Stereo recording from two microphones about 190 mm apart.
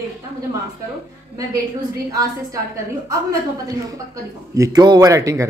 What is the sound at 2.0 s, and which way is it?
A woman's voice, 15° right (ahead or behind).